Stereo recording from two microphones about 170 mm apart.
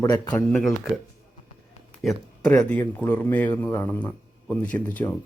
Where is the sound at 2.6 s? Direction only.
10° left (ahead or behind).